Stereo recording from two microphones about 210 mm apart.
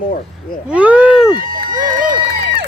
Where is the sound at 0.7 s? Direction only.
5° right (ahead or behind).